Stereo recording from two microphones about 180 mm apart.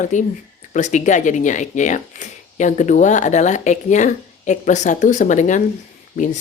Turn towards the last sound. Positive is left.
turn(degrees=45)  # may be behind; listen again after turning